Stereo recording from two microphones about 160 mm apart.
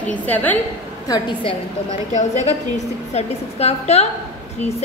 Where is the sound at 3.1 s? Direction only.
40° left (ahead or behind).